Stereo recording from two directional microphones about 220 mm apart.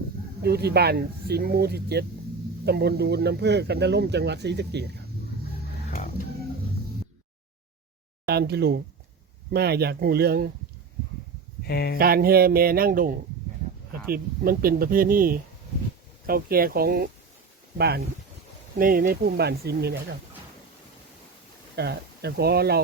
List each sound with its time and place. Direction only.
0.4 s speech: 45° right (ahead or behind)
8.3 s speech: 45° right (ahead or behind)
11.6 s speech: 45° left (ahead or behind)
11.9 s speech: 45° right (ahead or behind)
21.8 s speech: 50° right (ahead or behind)